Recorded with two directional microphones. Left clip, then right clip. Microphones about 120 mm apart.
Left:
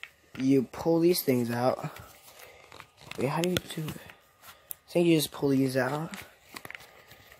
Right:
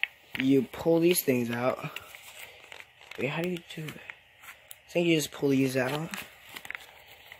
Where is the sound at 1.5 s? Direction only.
25° left (ahead or behind).